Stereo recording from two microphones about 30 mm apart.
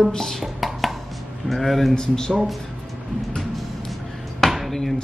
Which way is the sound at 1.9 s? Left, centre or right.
Left.